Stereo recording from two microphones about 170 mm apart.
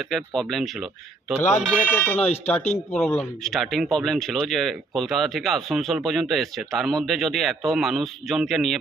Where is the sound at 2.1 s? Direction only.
40° left (ahead or behind).